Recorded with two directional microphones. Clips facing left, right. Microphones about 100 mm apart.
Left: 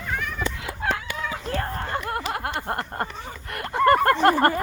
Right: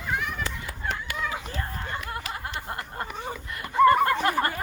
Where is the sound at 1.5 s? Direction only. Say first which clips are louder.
Left 6 dB; 55° left (ahead or behind).